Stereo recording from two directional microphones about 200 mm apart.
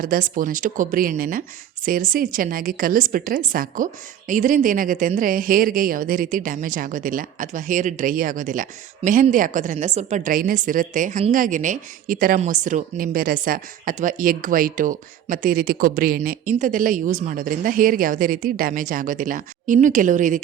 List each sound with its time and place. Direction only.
0.0 s a woman's voice: 45° right (ahead or behind)